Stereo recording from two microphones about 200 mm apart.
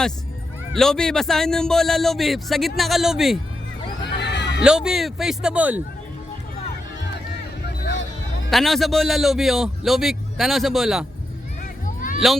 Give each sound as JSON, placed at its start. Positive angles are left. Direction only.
{"t": 0.7, "sound": "a man's voice", "side_deg": 0}
{"t": 4.0, "sound": "neigh", "side_deg": 60}
{"t": 4.6, "sound": "a man's voice", "side_deg": -5}
{"t": 7.6, "sound": "music", "side_deg": 60}
{"t": 8.4, "sound": "a man's voice", "side_deg": 0}